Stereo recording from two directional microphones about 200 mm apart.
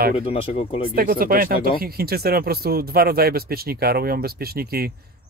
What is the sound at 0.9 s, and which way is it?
Speech, 45° right (ahead or behind).